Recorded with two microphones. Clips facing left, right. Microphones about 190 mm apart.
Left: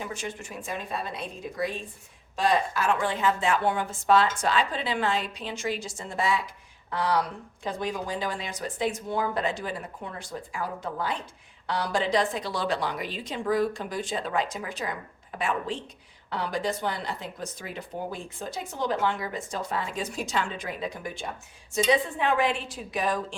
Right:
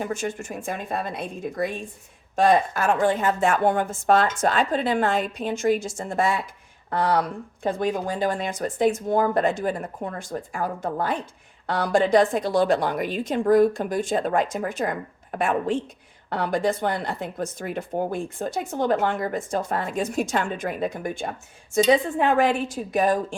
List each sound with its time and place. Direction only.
0.0 s speech: 45° right (ahead or behind)